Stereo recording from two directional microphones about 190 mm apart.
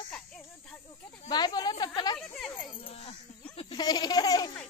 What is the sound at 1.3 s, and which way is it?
Speech, 20° left (ahead or behind).